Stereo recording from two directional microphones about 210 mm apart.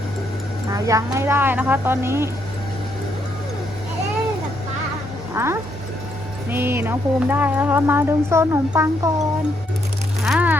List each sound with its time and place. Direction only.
0.7 s speech: 15° right (ahead or behind)
5.3 s speech: 10° right (ahead or behind)
10.2 s a sound: 5° right (ahead or behind)